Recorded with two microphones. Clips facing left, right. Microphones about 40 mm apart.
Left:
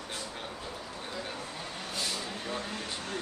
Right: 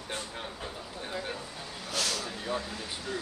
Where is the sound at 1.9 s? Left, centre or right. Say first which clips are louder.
Right 4 dB; right.